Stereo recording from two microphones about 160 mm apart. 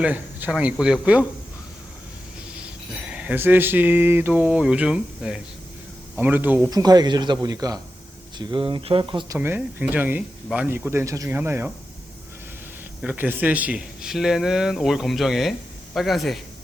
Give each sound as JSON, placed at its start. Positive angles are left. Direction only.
{"t": 0.0, "sound": "speech", "side_deg": -10}
{"t": 2.6, "sound": "a sound", "side_deg": -5}
{"t": 6.1, "sound": "speech", "side_deg": -10}
{"t": 6.7, "sound": "speech", "side_deg": -25}
{"t": 9.4, "sound": "speech", "side_deg": -15}
{"t": 13.0, "sound": "speech", "side_deg": -10}